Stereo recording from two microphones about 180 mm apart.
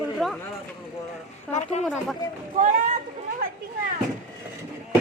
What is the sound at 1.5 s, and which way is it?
Speech, 40° left (ahead or behind).